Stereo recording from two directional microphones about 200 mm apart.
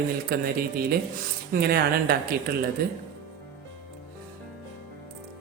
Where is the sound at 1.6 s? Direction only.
50° right (ahead or behind).